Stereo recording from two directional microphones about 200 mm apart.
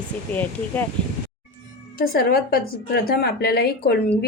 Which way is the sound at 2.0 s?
50° left (ahead or behind).